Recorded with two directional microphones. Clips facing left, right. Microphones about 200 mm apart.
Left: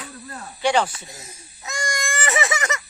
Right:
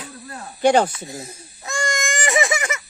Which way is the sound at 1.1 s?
30° right (ahead or behind).